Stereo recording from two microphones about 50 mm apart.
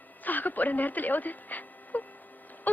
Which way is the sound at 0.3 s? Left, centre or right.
Left.